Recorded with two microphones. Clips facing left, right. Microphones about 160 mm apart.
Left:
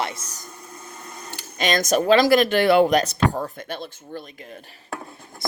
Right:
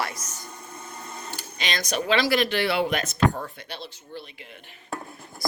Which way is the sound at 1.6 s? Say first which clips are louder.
Left 8 dB; 45° left (ahead or behind).